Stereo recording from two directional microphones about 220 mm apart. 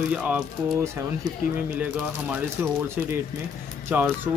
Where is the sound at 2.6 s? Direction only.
10° right (ahead or behind).